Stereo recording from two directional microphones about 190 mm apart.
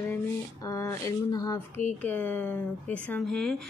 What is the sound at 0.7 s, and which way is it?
Speech, 15° left (ahead or behind).